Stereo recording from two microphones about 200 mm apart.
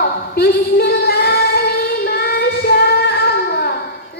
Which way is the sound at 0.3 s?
55° left (ahead or behind).